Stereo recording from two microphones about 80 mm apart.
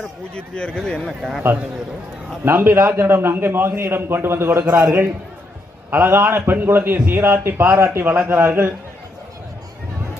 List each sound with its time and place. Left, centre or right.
0.3 s speech: centre
2.4 s a man's voice: right